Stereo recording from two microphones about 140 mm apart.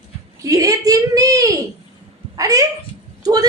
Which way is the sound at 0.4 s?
25° right (ahead or behind).